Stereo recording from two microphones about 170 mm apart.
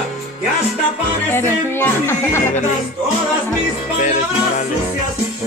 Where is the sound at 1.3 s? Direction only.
15° left (ahead or behind).